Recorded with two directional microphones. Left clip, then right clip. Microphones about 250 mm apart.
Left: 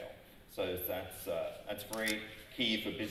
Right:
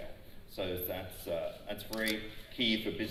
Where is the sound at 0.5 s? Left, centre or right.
Left.